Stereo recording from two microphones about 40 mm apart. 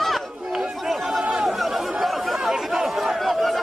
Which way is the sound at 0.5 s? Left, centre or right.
Centre.